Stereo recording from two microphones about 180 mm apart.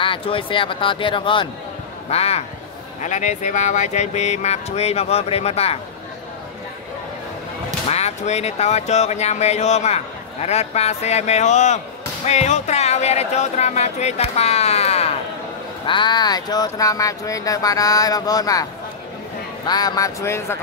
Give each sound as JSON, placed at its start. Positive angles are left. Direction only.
{"t": 0.0, "sound": "speech", "side_deg": 30}
{"t": 7.9, "sound": "speech", "side_deg": 40}
{"t": 19.7, "sound": "speech", "side_deg": 20}